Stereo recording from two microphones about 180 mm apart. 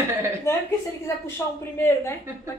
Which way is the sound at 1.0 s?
15° left (ahead or behind).